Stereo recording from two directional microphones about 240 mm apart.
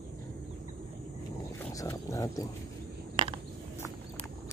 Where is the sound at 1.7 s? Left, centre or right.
Centre.